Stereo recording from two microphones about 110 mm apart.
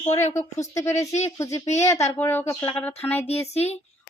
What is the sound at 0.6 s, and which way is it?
Speech, 30° left (ahead or behind).